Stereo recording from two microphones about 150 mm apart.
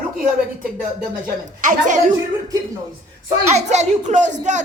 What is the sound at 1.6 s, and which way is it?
Speech, 60° right (ahead or behind).